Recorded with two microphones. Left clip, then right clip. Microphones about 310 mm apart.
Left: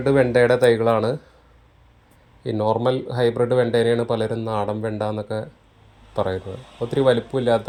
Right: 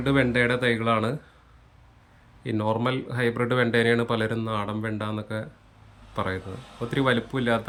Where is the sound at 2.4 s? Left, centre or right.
Centre.